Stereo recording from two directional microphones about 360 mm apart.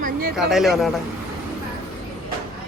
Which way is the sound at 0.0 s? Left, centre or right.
Right.